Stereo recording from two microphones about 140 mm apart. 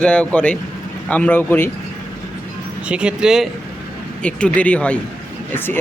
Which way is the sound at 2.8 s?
10° right (ahead or behind).